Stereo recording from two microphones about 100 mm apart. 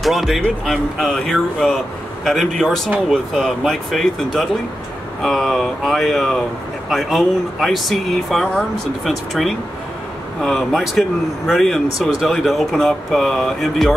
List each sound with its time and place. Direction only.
0.0 s a man's voice: centre (ahead or behind)